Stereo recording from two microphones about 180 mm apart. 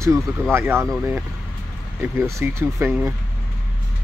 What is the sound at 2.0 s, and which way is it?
Speech, 15° right (ahead or behind).